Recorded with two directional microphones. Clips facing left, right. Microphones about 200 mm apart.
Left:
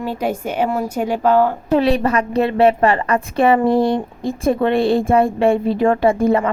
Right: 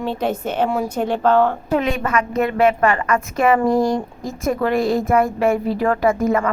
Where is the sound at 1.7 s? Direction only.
35° left (ahead or behind).